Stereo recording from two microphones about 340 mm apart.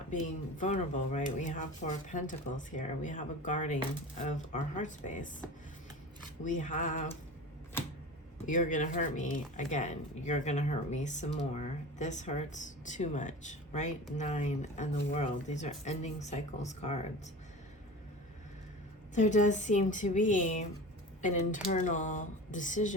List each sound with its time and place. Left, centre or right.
0.1 s speech: left
6.4 s speech: left
8.4 s speech: left
19.1 s speech: left